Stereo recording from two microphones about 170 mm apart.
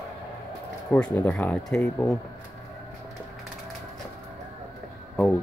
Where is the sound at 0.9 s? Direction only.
5° left (ahead or behind).